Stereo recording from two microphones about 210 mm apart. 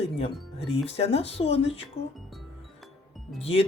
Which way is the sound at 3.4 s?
30° left (ahead or behind).